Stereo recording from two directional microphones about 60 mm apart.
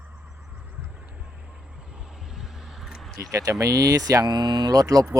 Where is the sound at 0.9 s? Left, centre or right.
Right.